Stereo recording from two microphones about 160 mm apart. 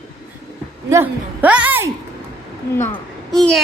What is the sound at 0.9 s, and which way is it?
A woman's voice, 15° right (ahead or behind).